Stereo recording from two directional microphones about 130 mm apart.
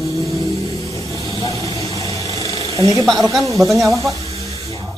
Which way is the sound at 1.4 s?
25° left (ahead or behind).